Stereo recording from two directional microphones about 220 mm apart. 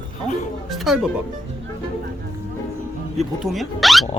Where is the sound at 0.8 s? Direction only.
5° right (ahead or behind).